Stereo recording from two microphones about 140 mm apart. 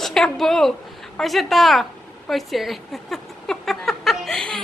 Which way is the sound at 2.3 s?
Centre (ahead or behind).